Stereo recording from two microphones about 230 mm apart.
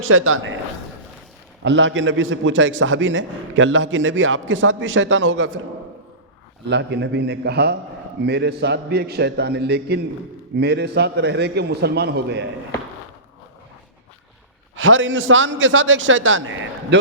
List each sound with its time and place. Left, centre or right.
0.1 s a man's voice: right
1.6 s a man's voice: right
6.7 s a man's voice: right
14.8 s a man's voice: right